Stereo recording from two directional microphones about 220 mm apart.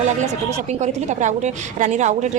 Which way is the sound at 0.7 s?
30° right (ahead or behind).